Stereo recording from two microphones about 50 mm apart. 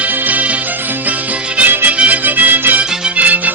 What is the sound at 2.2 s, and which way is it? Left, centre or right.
Music, right.